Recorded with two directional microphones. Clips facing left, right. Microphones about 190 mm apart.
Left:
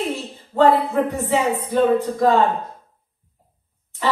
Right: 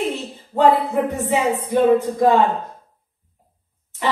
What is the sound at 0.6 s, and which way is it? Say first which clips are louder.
Speech: even; 15° right (ahead or behind).